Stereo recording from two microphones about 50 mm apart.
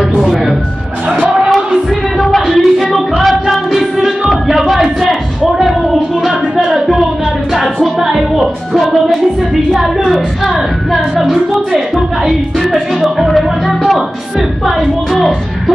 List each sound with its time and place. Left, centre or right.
0.2 s music: centre
1.2 s a sound: right
2.1 s music: centre
4.3 s a sound: centre
6.6 s music: centre
9.7 s a sound: centre
11.2 s a woman's voice: centre
12.3 s music: centre
14.8 s speech: centre